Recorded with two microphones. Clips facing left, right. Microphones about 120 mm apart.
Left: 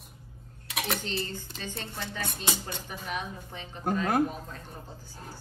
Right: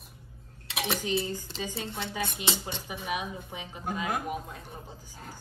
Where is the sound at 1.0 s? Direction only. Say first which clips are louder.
Right 4 dB; 10° right (ahead or behind).